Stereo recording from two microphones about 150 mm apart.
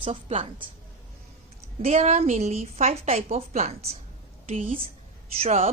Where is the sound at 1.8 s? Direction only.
50° right (ahead or behind).